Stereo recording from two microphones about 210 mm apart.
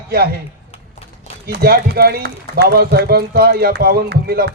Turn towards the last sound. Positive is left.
turn(degrees=-50)  # may be behind; listen again after turning